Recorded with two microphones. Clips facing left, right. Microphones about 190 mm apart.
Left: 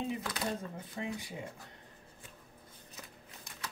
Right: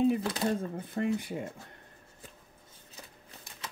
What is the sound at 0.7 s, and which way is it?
Speech, 55° right (ahead or behind).